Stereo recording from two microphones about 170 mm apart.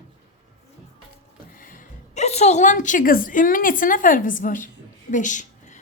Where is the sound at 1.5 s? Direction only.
55° left (ahead or behind).